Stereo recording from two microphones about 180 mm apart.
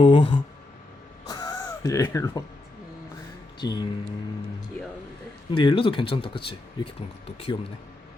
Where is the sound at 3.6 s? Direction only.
25° left (ahead or behind).